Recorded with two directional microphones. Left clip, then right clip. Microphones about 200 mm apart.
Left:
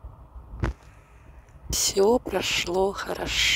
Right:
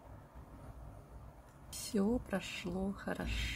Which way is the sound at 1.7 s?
55° left (ahead or behind).